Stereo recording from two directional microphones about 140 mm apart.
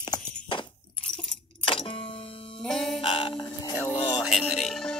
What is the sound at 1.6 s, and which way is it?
Music, 40° left (ahead or behind).